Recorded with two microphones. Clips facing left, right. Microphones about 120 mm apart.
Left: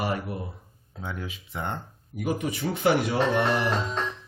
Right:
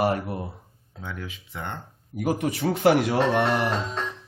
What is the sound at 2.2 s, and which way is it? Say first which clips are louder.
Speech: right 3 dB; 75° right (ahead or behind).